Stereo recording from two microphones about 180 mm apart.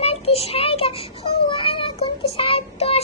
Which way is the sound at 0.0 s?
35° left (ahead or behind).